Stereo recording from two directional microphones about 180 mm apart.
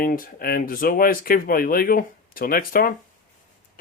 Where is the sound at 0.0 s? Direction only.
55° left (ahead or behind).